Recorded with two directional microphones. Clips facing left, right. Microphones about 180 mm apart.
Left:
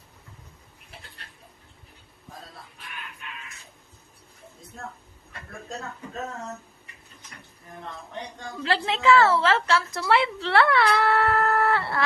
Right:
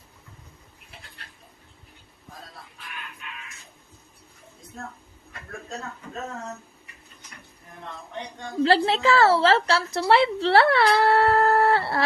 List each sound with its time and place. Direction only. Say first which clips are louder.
8.6 s a woman's voice: right 2 dB; 35° right (ahead or behind)